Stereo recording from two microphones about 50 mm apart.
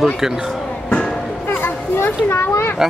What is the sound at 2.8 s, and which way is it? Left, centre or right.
Speech, centre.